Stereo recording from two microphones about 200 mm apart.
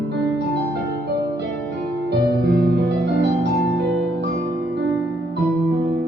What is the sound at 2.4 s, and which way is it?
Music, 55° right (ahead or behind).